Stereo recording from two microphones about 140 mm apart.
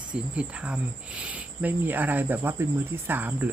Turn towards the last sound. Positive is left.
turn(degrees=-10)  # may be behind; listen again after turning